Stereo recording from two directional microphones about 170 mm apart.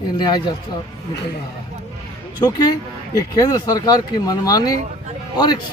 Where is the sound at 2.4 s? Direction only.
25° left (ahead or behind).